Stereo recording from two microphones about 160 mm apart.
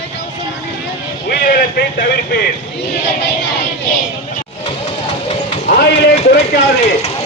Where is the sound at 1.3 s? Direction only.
80° left.